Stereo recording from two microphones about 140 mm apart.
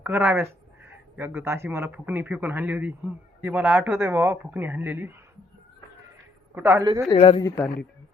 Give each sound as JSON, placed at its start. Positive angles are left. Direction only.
{"t": 0.0, "sound": "speech", "side_deg": -15}
{"t": 6.5, "sound": "a woman's voice", "side_deg": -20}
{"t": 7.1, "sound": "speech", "side_deg": 40}
{"t": 7.4, "sound": "speech", "side_deg": 20}